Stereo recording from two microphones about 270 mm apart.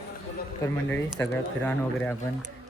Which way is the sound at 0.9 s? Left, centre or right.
Centre.